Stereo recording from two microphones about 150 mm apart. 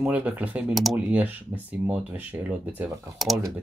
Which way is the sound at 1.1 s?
10° right (ahead or behind).